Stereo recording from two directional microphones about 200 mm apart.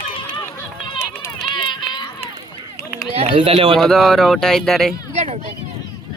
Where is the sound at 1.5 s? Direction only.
25° left (ahead or behind).